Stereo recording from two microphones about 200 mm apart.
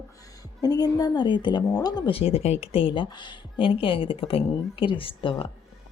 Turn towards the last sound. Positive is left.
turn(degrees=25)  # may be behind; listen again after turning